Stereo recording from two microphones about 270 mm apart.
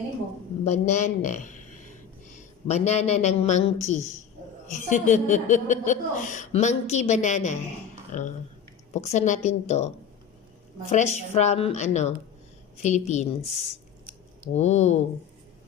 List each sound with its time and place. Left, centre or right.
0.6 s a woman's voice: left
14.5 s a woman's voice: left